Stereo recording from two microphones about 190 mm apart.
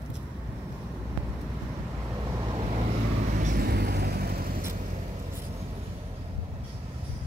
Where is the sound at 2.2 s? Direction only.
20° right (ahead or behind); by 4.6 s 50° right (ahead or behind).